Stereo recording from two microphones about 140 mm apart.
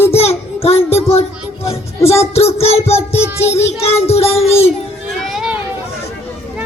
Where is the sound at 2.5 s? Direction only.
45° left (ahead or behind).